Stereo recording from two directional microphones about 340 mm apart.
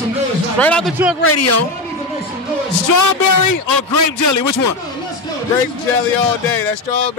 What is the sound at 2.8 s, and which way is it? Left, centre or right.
A man's voice, left.